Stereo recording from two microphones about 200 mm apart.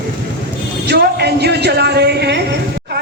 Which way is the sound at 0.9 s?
55° right (ahead or behind).